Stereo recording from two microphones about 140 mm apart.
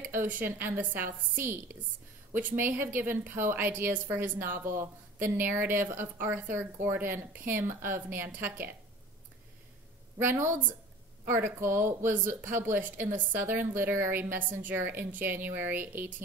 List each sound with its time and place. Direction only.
0.1 s a woman's voice: 15° right (ahead or behind)
10.1 s a woman's voice: 15° right (ahead or behind)